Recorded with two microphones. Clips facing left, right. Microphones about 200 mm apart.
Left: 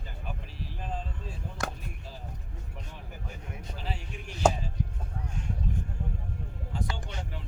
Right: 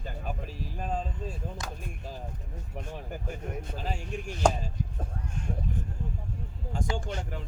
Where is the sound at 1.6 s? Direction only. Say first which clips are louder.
Left 5 dB; 60° left (ahead or behind).